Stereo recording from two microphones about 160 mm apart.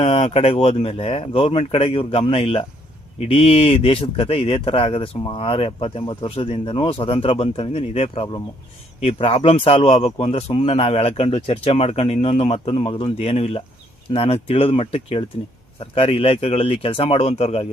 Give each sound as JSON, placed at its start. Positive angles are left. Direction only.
{"t": 0.0, "sound": "speech", "side_deg": 40}